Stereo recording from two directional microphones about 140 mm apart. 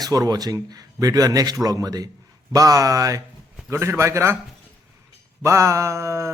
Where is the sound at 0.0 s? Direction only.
25° right (ahead or behind).